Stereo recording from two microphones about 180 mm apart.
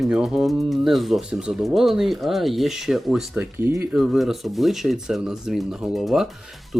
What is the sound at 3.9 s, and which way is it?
Speech, centre (ahead or behind).